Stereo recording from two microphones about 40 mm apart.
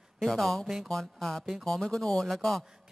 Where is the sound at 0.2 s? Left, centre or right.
Centre.